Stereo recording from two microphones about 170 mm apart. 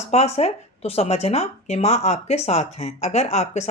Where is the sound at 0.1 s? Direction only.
40° left (ahead or behind).